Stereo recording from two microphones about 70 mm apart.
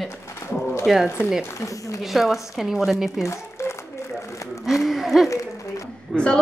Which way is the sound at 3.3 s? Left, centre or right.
Left.